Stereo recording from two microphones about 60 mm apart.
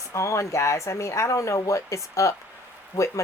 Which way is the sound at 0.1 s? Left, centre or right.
Left.